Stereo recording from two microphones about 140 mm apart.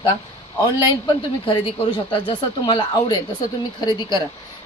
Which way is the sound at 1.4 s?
35° left (ahead or behind).